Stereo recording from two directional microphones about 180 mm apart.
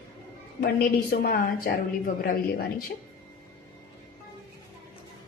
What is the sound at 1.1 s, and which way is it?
A woman's voice, 55° left (ahead or behind).